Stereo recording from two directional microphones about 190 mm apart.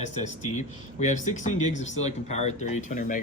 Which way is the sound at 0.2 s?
40° left (ahead or behind).